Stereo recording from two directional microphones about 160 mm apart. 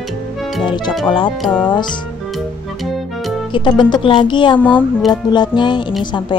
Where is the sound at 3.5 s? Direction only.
30° left (ahead or behind).